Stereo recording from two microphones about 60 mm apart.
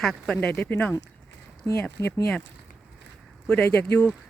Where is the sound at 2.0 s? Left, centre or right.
Left.